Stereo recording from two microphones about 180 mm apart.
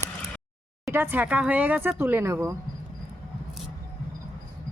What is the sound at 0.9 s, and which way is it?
Speech, 10° right (ahead or behind).